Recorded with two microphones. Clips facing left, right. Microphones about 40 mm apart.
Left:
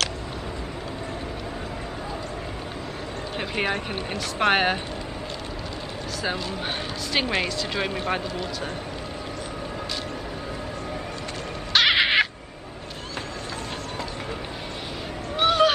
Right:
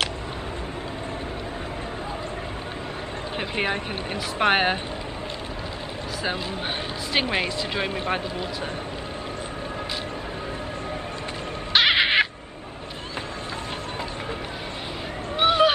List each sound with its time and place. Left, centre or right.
3.3 s speech: centre
7.1 s speech: centre
11.7 s crow: centre
15.3 s a sound: centre